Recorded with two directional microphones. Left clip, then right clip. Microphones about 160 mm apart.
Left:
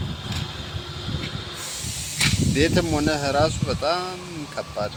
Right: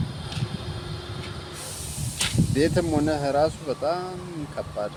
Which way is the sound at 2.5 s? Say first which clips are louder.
Right 1 dB; centre (ahead or behind).